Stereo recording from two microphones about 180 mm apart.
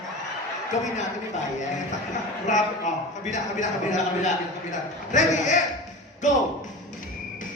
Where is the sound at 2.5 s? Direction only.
45° left (ahead or behind).